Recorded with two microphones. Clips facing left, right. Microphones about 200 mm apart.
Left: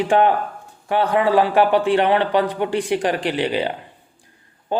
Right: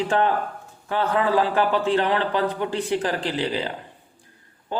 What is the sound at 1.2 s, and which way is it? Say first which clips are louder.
A man's voice: left 5 dB; 70° left (ahead or behind).